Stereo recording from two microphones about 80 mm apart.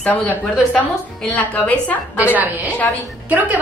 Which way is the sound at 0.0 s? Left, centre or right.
Centre.